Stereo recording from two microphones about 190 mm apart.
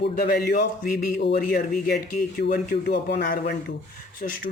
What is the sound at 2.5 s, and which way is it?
Speech, 60° left (ahead or behind).